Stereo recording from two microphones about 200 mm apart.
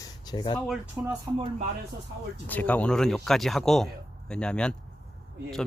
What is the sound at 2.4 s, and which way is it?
Speech, 10° left (ahead or behind).